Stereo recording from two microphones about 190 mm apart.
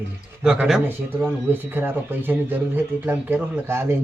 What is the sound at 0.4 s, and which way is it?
Speech, 5° right (ahead or behind).